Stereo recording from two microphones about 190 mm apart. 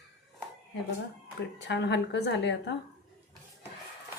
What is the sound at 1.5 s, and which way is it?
A woman's voice, 65° left (ahead or behind).